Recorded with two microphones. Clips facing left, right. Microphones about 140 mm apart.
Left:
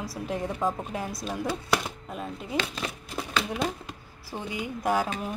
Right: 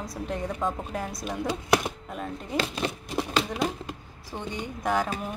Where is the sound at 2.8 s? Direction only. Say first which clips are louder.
Right 5 dB; 25° right (ahead or behind).